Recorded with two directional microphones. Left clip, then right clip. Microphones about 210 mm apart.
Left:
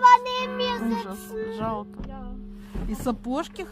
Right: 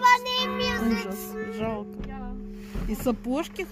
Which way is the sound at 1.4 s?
Centre (ahead or behind).